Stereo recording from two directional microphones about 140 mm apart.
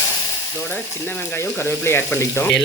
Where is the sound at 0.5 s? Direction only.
10° left (ahead or behind).